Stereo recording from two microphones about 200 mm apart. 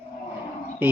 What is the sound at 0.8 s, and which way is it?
Speech, 10° right (ahead or behind).